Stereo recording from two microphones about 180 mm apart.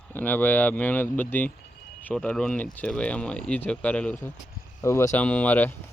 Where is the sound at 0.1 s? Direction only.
10° left (ahead or behind).